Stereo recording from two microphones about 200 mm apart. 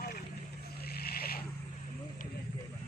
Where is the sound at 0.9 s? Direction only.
50° left (ahead or behind).